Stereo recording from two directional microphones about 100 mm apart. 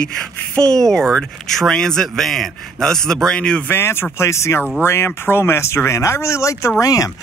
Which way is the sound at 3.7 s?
25° left (ahead or behind).